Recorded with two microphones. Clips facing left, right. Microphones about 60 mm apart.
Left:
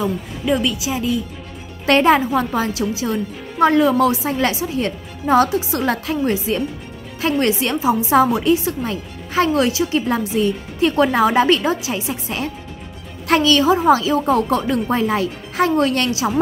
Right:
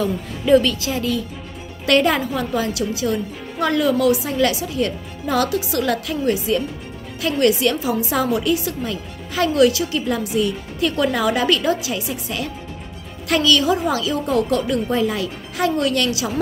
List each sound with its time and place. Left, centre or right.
0.0 s a woman's voice: centre
1.9 s a woman's voice: left